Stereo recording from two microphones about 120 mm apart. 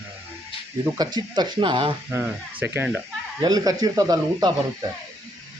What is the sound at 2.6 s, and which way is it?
Speech, 15° right (ahead or behind).